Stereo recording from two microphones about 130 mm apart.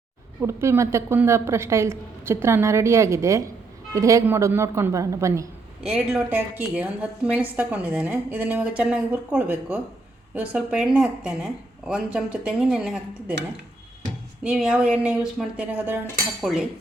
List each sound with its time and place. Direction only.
0.4 s a woman's voice: 20° right (ahead or behind)
5.8 s a woman's voice: 5° right (ahead or behind)
14.4 s a woman's voice: 5° right (ahead or behind)